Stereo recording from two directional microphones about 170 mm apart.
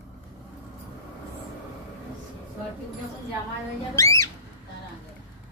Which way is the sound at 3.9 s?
20° left (ahead or behind).